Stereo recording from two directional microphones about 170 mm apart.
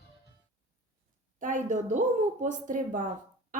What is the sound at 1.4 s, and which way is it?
A woman's voice, 50° right (ahead or behind).